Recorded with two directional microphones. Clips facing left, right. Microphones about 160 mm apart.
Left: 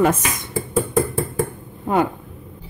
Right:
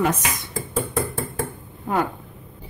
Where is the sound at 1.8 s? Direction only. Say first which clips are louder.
Left 4 dB; 20° left (ahead or behind).